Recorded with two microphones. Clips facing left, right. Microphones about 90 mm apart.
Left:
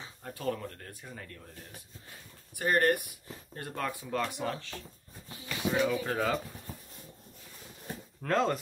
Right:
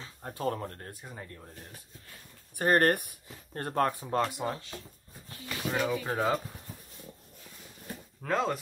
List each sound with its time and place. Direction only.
0.2 s speech: 30° right (ahead or behind)
1.0 s speech: 20° right (ahead or behind)
2.5 s speech: 45° right (ahead or behind)
4.4 s speech: 20° right (ahead or behind)
5.7 s speech: 5° right (ahead or behind)
6.0 s speech: 20° right (ahead or behind)
8.2 s speech: 5° right (ahead or behind)